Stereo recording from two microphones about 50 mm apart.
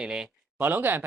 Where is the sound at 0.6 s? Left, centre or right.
Right.